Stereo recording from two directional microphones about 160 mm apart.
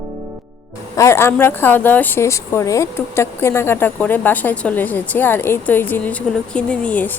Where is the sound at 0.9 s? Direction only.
20° left (ahead or behind).